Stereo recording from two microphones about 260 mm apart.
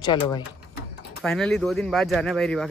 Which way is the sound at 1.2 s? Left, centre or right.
Centre.